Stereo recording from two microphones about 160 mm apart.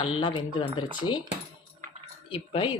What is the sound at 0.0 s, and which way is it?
Speech, 30° left (ahead or behind).